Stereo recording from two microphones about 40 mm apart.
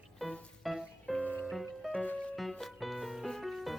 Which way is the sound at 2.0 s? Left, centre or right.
Left.